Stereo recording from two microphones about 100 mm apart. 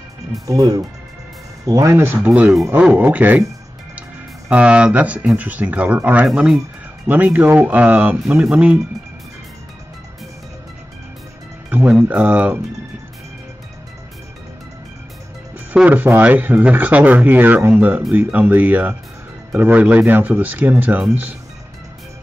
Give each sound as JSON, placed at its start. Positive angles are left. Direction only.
{"t": 0.5, "sound": "speech", "side_deg": -35}
{"t": 4.5, "sound": "speech", "side_deg": -10}
{"t": 11.7, "sound": "speech", "side_deg": -15}
{"t": 15.7, "sound": "speech", "side_deg": -15}